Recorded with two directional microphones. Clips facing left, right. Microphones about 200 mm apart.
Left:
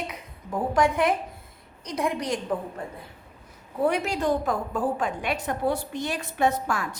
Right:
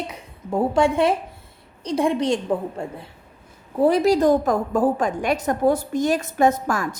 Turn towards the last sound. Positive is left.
turn(degrees=-45)  # may be behind; listen again after turning